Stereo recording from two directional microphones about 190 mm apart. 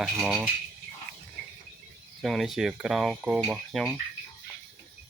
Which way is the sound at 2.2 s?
Centre (ahead or behind).